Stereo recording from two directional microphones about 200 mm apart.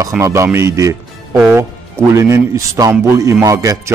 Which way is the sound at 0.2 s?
15° right (ahead or behind).